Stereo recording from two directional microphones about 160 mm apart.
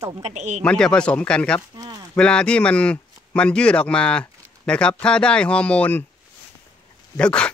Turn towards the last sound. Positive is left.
turn(degrees=5)  # may be behind; listen again after turning